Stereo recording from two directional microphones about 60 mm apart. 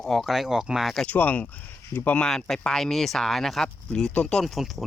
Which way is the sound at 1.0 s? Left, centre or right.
Left.